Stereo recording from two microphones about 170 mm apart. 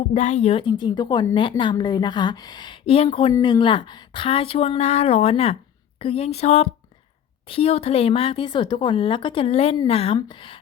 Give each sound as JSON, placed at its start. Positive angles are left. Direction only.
{"t": 0.1, "sound": "speech", "side_deg": 45}